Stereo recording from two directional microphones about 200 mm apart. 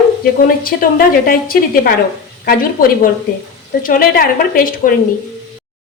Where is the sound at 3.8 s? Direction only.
45° left (ahead or behind).